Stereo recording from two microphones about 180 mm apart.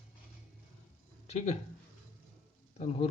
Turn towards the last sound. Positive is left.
turn(degrees=35)  # may be behind; listen again after turning